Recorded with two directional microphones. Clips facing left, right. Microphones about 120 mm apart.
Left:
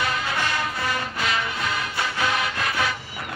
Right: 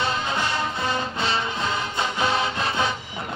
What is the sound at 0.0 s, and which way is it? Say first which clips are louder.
Music: right 1 dB; 25° right (ahead or behind).